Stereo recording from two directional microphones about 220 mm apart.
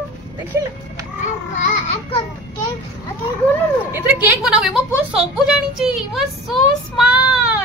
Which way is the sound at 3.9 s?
5° right (ahead or behind).